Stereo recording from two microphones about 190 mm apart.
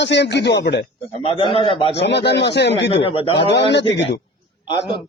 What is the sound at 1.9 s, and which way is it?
Speech, 65° left (ahead or behind).